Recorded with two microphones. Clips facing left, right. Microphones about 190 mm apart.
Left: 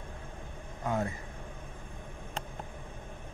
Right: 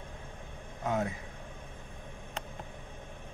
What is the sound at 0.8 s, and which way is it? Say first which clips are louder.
Speech: even; centre (ahead or behind).